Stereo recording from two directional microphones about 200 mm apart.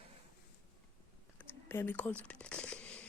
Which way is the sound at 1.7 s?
10° left (ahead or behind).